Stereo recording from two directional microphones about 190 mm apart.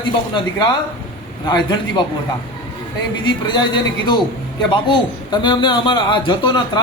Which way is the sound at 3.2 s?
25° left (ahead or behind).